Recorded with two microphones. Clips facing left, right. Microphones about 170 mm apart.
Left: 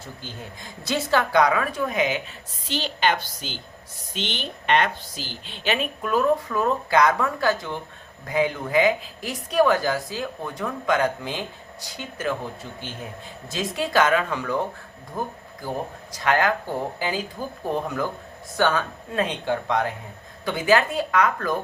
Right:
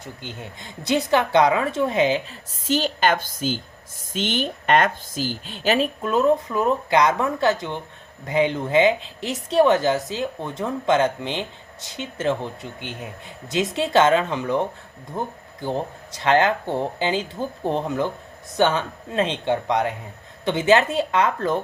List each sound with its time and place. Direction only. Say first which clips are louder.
0.0 s a woman's voice: right 2 dB; 20° right (ahead or behind)
2.6 s a woman's voice: right 4 dB; 45° right (ahead or behind)
6.0 s a woman's voice: right 2 dB; 20° right (ahead or behind)